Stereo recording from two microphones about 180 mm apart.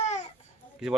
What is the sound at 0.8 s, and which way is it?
Speech, 5° right (ahead or behind).